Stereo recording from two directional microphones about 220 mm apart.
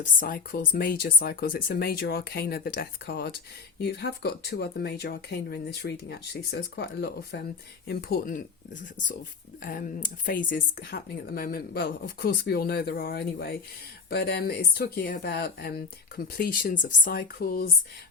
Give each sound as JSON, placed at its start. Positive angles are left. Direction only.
{"t": 0.0, "sound": "speech", "side_deg": 40}